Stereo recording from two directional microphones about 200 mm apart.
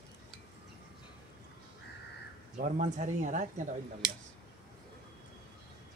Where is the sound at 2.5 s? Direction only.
40° right (ahead or behind).